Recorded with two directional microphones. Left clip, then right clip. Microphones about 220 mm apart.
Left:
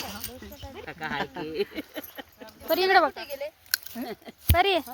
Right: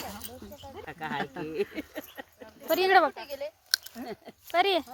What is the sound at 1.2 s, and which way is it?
Speech, 20° right (ahead or behind).